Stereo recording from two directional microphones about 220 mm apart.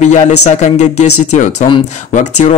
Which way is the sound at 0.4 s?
30° left (ahead or behind).